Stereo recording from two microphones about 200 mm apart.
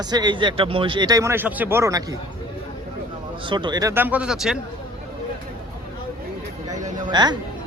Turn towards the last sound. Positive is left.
turn(degrees=-20)  # may be behind; listen again after turning